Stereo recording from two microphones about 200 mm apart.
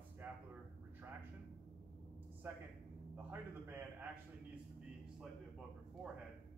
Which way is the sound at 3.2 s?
10° right (ahead or behind).